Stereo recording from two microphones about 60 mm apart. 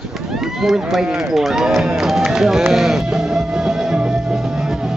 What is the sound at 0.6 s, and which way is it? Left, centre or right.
Speech, centre.